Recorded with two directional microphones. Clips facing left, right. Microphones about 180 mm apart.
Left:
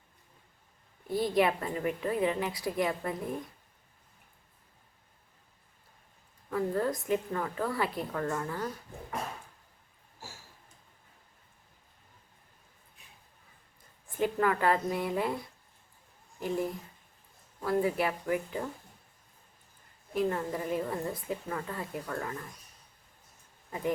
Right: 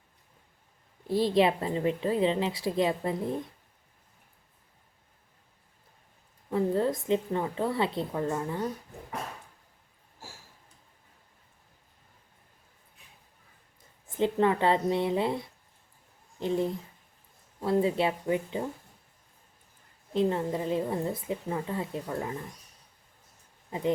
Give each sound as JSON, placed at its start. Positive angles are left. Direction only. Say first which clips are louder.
{"t": 1.0, "sound": "a woman's voice", "louder": "right 3 dB", "side_deg": -30}
{"t": 6.5, "sound": "a woman's voice", "louder": "right 3 dB", "side_deg": -25}
{"t": 14.2, "sound": "a woman's voice", "louder": "right 3 dB", "side_deg": -25}
{"t": 20.1, "sound": "a woman's voice", "louder": "right 3 dB", "side_deg": -20}